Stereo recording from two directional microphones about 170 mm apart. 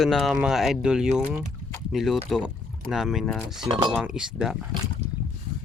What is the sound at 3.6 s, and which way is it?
Speech, 30° right (ahead or behind).